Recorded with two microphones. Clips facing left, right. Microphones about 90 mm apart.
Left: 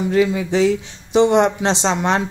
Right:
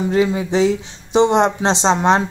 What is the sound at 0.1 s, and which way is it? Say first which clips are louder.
Speech: left 1 dB; 25° right (ahead or behind).